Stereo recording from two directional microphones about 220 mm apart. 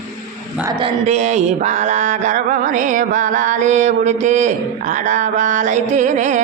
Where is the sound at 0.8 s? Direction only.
30° right (ahead or behind).